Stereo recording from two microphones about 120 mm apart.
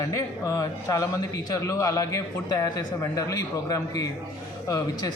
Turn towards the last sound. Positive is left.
turn(degrees=30)  # may be behind; listen again after turning